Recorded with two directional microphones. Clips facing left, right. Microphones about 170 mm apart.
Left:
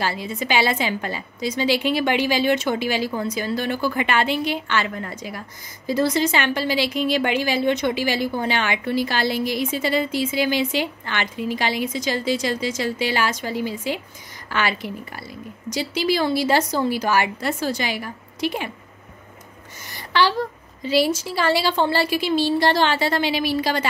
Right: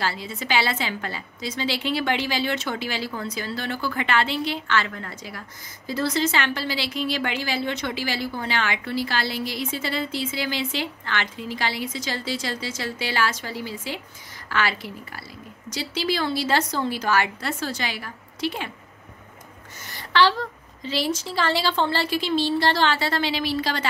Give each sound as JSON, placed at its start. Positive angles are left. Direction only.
{"t": 0.0, "sound": "a woman's voice", "side_deg": 15}
{"t": 19.9, "sound": "a woman's voice", "side_deg": 15}